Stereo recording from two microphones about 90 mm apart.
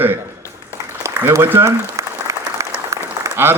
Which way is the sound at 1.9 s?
35° right (ahead or behind).